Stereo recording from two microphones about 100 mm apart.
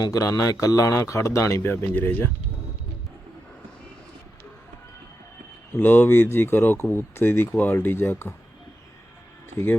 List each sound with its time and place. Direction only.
0.0 s speech: 35° left (ahead or behind); by 2.3 s 20° left (ahead or behind)
5.7 s speech: 20° left (ahead or behind)